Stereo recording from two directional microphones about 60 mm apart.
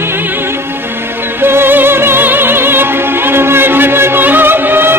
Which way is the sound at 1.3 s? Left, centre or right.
Right.